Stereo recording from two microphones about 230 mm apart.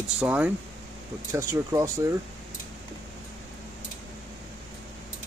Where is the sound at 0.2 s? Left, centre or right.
Centre.